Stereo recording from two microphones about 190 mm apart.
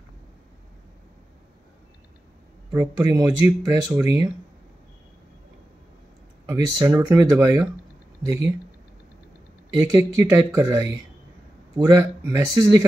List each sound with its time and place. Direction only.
2.7 s speech: 15° right (ahead or behind)
6.4 s speech: 15° right (ahead or behind)
9.8 s speech: 15° right (ahead or behind)